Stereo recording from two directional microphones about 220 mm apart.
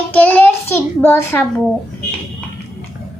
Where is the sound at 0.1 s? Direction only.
5° left (ahead or behind).